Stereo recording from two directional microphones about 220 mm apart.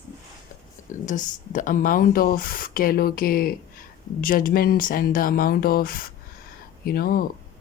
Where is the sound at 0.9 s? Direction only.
35° left (ahead or behind).